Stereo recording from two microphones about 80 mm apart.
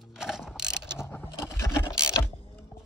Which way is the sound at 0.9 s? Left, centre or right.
Left.